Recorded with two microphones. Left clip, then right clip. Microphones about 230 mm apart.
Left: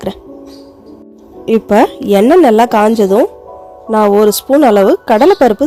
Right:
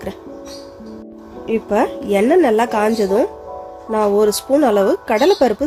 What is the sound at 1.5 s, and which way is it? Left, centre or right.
A woman's voice, left.